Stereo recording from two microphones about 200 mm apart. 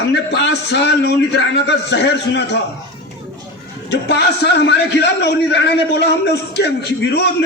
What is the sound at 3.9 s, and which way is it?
A man's voice, 60° left (ahead or behind).